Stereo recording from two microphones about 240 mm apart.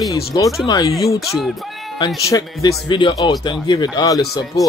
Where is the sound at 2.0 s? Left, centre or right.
Centre.